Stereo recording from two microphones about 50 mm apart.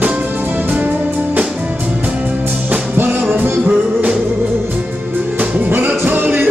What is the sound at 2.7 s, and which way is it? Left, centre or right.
Music, right.